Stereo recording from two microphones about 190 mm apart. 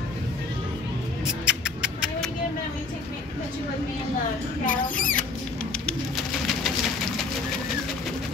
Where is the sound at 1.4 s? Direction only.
5° right (ahead or behind).